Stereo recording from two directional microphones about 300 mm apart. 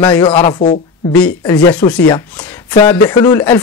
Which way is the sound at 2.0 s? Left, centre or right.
Centre.